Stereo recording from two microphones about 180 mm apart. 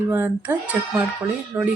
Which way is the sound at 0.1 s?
10° right (ahead or behind).